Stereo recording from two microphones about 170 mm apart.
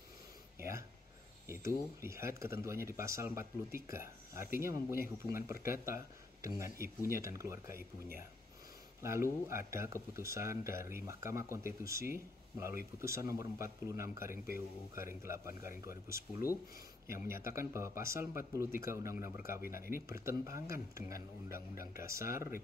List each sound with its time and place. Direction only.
0.6 s a sound: 15° right (ahead or behind)
2.0 s speech: 15° right (ahead or behind)
9.0 s speech: 15° right (ahead or behind)
14.3 s speech: 55° left (ahead or behind)
15.2 s speech: 15° right (ahead or behind)
17.5 s speech: 15° right (ahead or behind)